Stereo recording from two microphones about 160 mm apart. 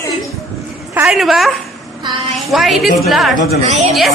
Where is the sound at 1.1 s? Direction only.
Centre (ahead or behind).